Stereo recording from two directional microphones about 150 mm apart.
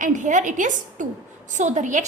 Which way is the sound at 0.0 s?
55° right (ahead or behind).